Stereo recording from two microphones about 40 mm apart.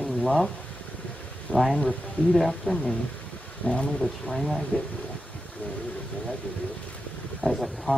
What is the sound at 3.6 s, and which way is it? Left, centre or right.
Speech, left.